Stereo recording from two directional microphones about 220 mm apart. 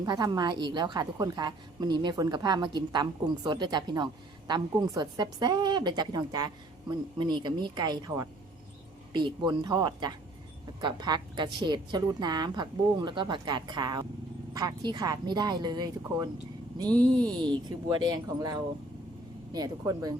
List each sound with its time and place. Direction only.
0.0 s a woman's voice: 20° right (ahead or behind)
17.4 s speech: 20° right (ahead or behind)